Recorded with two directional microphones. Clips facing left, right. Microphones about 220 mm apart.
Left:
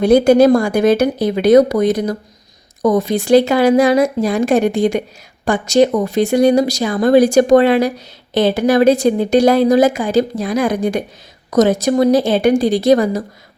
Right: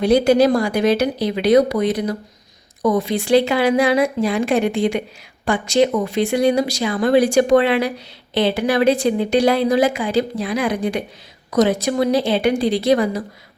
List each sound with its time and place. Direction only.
0.0 s speech: 50° left (ahead or behind)